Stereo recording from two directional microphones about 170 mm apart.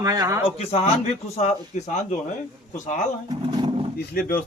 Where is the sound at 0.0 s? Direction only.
20° right (ahead or behind).